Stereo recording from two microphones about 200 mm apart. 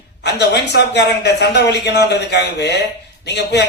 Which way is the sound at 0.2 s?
55° left (ahead or behind).